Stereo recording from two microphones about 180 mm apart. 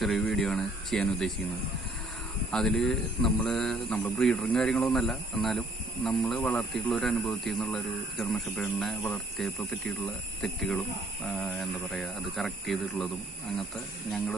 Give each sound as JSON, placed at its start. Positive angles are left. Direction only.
{"t": 0.0, "sound": "speech", "side_deg": 0}
{"t": 2.5, "sound": "speech", "side_deg": 0}